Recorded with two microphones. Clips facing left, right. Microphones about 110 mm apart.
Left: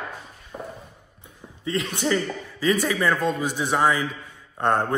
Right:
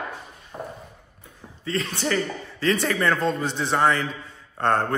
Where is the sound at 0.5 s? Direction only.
10° right (ahead or behind).